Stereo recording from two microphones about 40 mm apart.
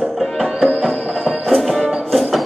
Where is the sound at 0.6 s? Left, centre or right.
Centre.